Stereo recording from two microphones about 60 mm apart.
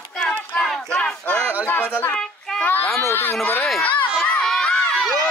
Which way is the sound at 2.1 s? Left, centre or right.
Centre.